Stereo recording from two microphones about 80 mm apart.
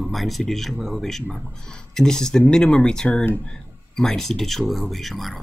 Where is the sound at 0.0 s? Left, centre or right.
Centre.